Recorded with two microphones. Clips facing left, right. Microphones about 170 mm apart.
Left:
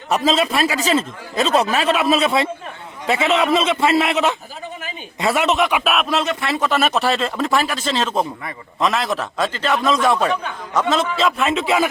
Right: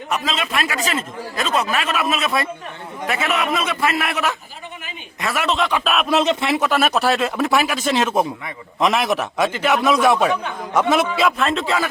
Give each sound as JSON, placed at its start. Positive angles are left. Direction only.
{"t": 0.1, "sound": "a man's voice", "side_deg": 35}
{"t": 6.1, "sound": "speech", "side_deg": -20}
{"t": 6.6, "sound": "speech", "side_deg": -5}
{"t": 11.3, "sound": "speech", "side_deg": 5}